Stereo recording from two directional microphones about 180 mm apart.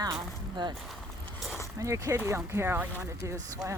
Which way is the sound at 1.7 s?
20° right (ahead or behind).